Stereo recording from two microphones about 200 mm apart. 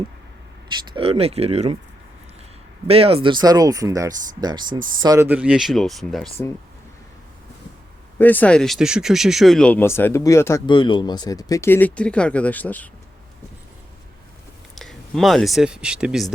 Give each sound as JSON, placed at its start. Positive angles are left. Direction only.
{"t": 0.9, "sound": "speech", "side_deg": -30}
{"t": 2.8, "sound": "speech", "side_deg": -30}
{"t": 8.2, "sound": "speech", "side_deg": 10}
{"t": 14.8, "sound": "speech", "side_deg": 0}